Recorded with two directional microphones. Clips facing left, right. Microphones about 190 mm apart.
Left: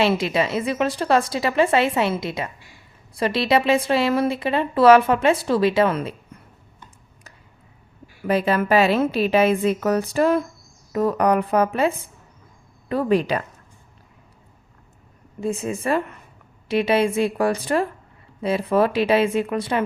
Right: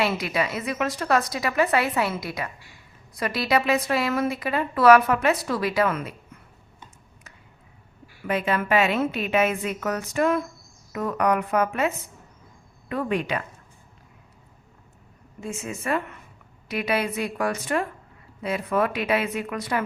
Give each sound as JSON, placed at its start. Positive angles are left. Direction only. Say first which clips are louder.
{"t": 0.0, "sound": "a woman's voice", "louder": "left 5 dB", "side_deg": 25}
{"t": 8.3, "sound": "a woman's voice", "louder": "left 4 dB", "side_deg": 35}
{"t": 15.4, "sound": "a woman's voice", "louder": "left 8 dB", "side_deg": 35}